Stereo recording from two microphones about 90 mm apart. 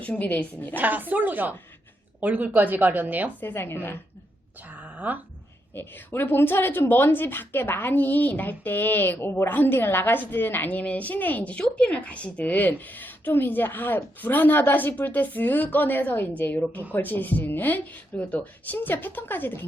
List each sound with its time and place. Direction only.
0.0 s a woman's voice: 15° left (ahead or behind)
0.8 s a woman's voice: 20° right (ahead or behind)
3.4 s speech: 25° left (ahead or behind)
4.9 s speech: 20° right (ahead or behind)
5.7 s speech: 25° left (ahead or behind)